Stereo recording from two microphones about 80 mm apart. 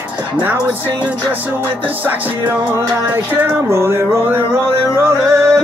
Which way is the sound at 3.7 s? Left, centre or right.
Right.